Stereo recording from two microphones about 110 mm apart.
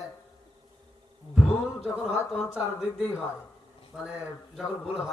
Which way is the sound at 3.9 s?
10° right (ahead or behind).